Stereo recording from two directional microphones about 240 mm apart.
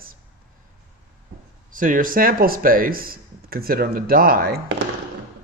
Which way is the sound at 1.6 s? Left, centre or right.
Right.